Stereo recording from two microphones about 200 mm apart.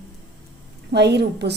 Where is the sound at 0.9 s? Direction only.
55° right (ahead or behind).